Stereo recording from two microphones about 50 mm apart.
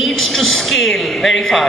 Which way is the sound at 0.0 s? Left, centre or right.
Centre.